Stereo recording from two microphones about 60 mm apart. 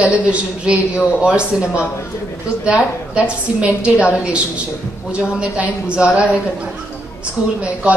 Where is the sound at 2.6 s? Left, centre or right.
Right.